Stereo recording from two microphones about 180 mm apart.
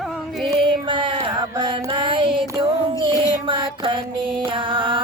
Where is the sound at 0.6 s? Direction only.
25° right (ahead or behind).